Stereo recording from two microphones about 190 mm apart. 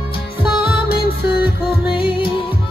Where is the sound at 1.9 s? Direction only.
25° left (ahead or behind).